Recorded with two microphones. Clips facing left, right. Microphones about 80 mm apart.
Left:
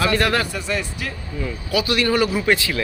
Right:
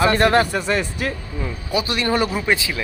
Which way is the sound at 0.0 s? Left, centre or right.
Right.